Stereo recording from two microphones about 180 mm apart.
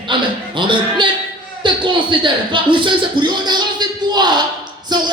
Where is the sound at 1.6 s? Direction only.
25° right (ahead or behind).